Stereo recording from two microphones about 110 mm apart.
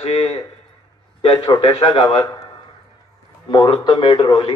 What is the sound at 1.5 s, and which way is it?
Speech, 50° left (ahead or behind).